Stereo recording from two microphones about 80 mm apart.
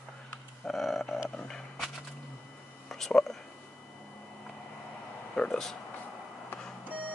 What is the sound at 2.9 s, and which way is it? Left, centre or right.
Speech, centre.